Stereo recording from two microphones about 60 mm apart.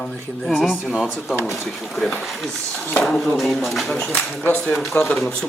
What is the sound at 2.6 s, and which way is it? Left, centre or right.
Speech, left.